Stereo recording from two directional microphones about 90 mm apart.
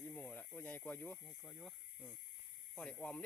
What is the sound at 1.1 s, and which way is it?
Speech, centre (ahead or behind).